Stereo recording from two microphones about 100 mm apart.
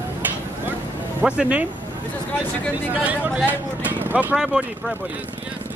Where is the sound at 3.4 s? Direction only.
15° right (ahead or behind).